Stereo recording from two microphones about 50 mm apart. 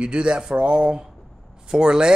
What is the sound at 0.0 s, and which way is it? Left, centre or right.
Speech, centre.